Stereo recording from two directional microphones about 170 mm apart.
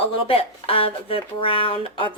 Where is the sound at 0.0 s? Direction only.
35° left (ahead or behind).